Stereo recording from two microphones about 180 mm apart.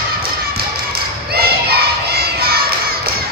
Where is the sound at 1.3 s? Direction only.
60° right (ahead or behind).